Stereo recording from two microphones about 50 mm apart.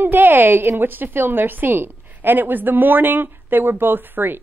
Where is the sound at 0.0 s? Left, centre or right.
Right.